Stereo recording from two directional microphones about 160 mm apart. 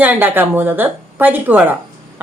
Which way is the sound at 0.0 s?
10° right (ahead or behind).